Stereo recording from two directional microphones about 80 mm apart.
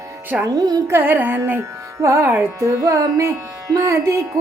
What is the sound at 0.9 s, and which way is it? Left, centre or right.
Music, right.